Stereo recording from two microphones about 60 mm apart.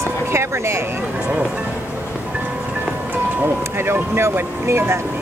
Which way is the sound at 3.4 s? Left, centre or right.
Right.